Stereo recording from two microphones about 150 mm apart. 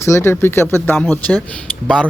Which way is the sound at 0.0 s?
15° left (ahead or behind).